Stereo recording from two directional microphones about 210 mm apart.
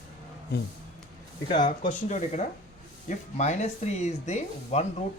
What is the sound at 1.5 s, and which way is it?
Speech, 35° left (ahead or behind).